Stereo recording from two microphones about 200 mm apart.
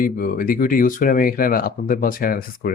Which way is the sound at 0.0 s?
45° left (ahead or behind).